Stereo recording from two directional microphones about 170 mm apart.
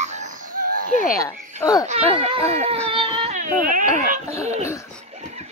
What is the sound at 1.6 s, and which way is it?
Speech, 20° left (ahead or behind).